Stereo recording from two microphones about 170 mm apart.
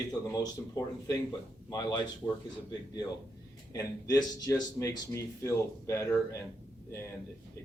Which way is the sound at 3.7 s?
20° left (ahead or behind).